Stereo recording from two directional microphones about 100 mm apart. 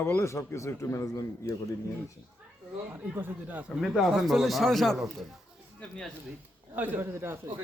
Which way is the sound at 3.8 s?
5° right (ahead or behind).